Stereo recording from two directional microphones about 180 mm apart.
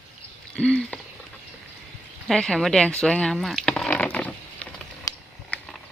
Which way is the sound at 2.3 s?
Centre (ahead or behind).